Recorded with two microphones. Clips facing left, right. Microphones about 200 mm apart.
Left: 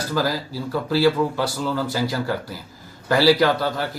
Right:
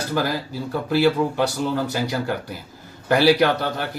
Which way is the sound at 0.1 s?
20° right (ahead or behind).